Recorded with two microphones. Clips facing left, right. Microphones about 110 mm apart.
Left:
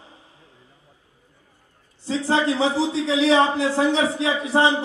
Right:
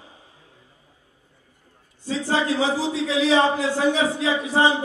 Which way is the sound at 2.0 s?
25° left (ahead or behind).